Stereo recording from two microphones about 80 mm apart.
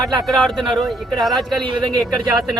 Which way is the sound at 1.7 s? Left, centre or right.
Right.